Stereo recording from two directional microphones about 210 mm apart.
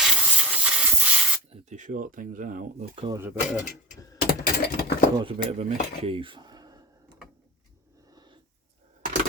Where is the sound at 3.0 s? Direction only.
15° right (ahead or behind).